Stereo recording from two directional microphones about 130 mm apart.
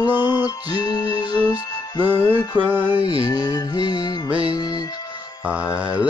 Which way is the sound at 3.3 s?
25° left (ahead or behind).